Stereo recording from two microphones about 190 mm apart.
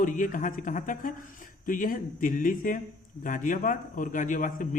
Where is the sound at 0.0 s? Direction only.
45° left (ahead or behind).